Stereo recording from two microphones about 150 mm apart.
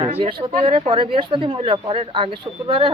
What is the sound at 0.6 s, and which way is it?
Speech, 35° right (ahead or behind).